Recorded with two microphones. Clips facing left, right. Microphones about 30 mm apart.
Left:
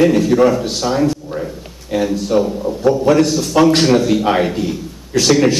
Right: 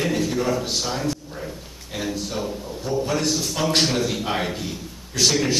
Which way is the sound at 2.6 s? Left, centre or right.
Left.